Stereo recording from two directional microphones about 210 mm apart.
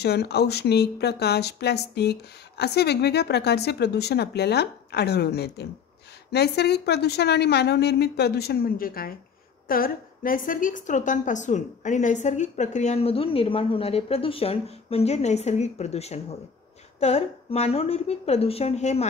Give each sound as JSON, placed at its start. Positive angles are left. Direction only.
{"t": 0.0, "sound": "a woman's voice", "side_deg": 50}